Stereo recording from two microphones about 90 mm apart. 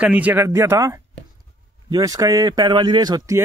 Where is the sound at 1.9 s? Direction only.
40° right (ahead or behind).